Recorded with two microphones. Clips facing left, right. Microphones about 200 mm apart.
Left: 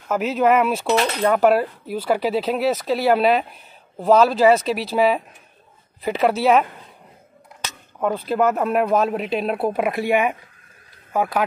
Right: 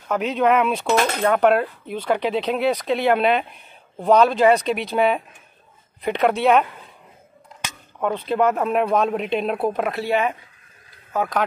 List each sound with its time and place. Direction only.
0.1 s speech: 5° left (ahead or behind)
0.9 s speech: 50° right (ahead or behind)
1.2 s speech: 5° left (ahead or behind)
8.0 s speech: 5° left (ahead or behind)